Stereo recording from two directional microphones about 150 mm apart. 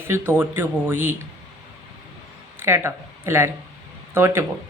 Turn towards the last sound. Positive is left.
turn(degrees=-20)  # may be behind; listen again after turning